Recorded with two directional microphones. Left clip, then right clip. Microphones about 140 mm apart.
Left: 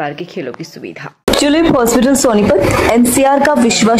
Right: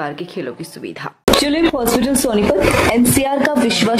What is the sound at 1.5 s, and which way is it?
Speech, 35° left (ahead or behind).